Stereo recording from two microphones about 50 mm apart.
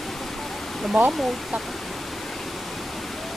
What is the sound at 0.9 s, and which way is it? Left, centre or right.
Speech, right.